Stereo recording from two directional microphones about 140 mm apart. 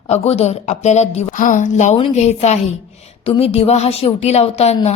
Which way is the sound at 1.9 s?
50° left (ahead or behind).